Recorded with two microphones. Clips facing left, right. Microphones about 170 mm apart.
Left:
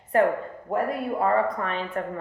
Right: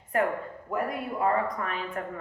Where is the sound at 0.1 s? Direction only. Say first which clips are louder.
Left 6 dB; 30° left (ahead or behind).